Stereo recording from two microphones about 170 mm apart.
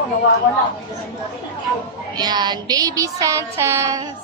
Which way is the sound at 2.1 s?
25° right (ahead or behind).